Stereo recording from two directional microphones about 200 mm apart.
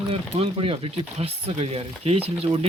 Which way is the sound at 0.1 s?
30° right (ahead or behind).